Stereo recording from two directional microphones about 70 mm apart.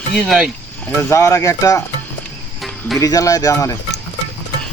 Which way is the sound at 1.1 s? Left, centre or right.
Left.